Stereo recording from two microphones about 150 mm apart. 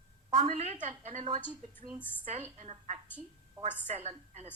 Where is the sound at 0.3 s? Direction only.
45° right (ahead or behind).